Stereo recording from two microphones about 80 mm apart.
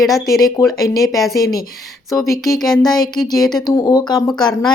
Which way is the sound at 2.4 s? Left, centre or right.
Centre.